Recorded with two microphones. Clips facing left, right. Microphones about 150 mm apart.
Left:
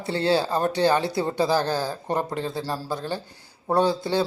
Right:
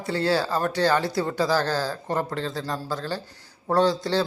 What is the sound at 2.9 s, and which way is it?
A man's voice, 15° left (ahead or behind).